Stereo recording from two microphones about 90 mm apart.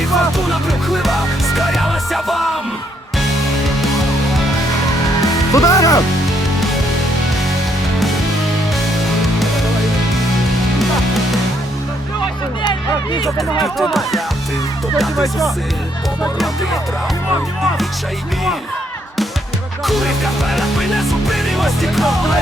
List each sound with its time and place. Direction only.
0.0 s music: centre (ahead or behind)
5.2 s music: 40° left (ahead or behind)
13.6 s music: centre (ahead or behind)
19.8 s music: centre (ahead or behind)